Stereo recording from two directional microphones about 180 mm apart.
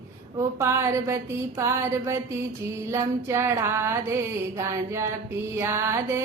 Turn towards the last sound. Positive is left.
turn(degrees=-15)  # may be behind; listen again after turning